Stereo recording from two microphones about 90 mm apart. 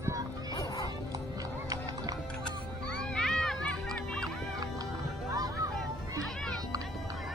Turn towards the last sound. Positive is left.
turn(degrees=-40)  # may be behind; listen again after turning